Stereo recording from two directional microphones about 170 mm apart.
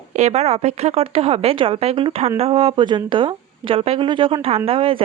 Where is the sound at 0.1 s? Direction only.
40° right (ahead or behind).